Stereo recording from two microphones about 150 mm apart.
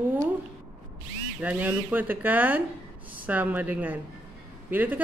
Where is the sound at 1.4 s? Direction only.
10° right (ahead or behind).